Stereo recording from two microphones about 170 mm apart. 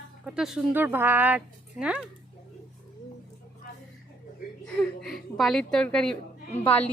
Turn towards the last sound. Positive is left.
turn(degrees=10)  # may be behind; listen again after turning